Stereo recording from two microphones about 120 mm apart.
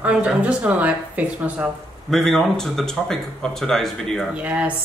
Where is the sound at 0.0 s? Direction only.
10° right (ahead or behind).